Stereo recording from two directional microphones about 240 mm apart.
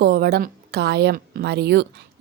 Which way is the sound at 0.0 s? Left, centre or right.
Right.